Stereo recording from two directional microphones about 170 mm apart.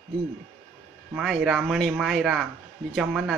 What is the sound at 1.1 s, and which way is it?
Speech, centre (ahead or behind).